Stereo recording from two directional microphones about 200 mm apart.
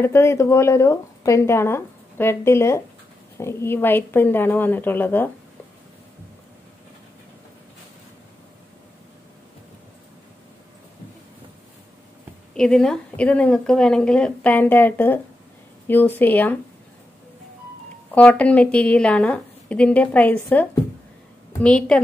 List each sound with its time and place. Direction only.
0.0 s speech: 15° left (ahead or behind)
12.5 s a woman's voice: 5° left (ahead or behind)
18.1 s speech: 5° left (ahead or behind)
21.6 s a woman's voice: 5° left (ahead or behind)